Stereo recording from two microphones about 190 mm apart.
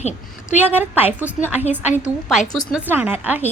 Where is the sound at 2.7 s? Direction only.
10° right (ahead or behind).